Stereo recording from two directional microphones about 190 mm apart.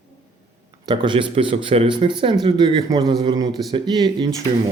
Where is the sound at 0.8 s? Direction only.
25° right (ahead or behind).